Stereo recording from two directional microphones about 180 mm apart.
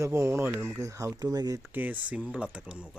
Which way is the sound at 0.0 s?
15° right (ahead or behind).